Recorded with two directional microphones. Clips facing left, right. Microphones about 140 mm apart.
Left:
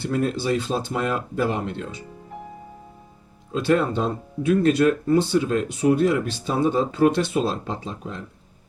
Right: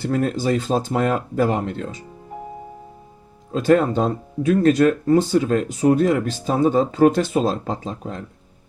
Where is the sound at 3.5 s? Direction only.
45° right (ahead or behind).